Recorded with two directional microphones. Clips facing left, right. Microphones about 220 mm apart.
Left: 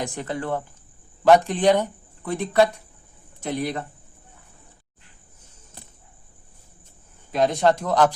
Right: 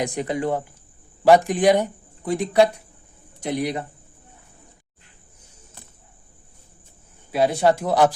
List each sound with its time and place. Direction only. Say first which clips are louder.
0.0 s speech: right 5 dB; 15° right (ahead or behind)
7.3 s speech: right 1 dB; 10° right (ahead or behind)